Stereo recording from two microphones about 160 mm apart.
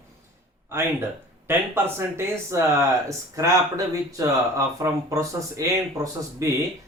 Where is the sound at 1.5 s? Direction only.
15° right (ahead or behind).